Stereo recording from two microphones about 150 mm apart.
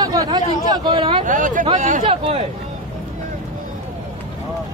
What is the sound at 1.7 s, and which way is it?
Chatter, 55° right (ahead or behind).